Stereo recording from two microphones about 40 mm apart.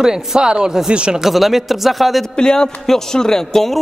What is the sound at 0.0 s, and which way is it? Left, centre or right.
Speech, centre.